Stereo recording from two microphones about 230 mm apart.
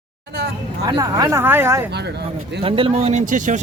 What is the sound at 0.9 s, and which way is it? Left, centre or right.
Speech, centre.